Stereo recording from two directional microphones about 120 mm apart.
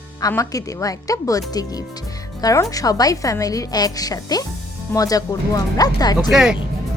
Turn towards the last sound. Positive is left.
turn(degrees=-5)  # may be behind; listen again after turning